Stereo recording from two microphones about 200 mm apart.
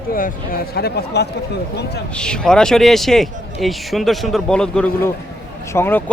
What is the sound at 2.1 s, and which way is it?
Speech, 5° left (ahead or behind).